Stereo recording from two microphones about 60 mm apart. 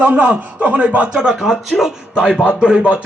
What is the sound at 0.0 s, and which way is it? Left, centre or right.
A man's voice, right.